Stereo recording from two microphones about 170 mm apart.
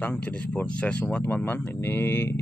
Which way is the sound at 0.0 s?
10° left (ahead or behind).